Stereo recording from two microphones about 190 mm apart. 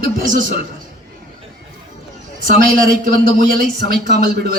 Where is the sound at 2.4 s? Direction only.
45° right (ahead or behind).